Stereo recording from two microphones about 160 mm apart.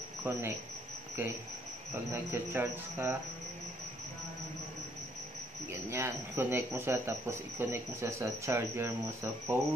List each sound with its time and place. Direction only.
0.2 s speech: 15° right (ahead or behind)
2.1 s speech: 10° right (ahead or behind)
5.7 s speech: 15° right (ahead or behind)